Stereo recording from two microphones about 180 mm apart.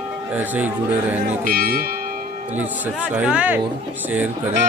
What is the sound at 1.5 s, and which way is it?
Speech, 55° right (ahead or behind).